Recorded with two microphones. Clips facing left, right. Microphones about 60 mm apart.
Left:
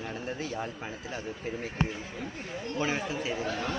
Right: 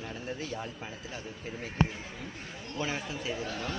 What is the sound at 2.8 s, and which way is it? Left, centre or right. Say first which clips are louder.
Speech: left 3 dB; centre.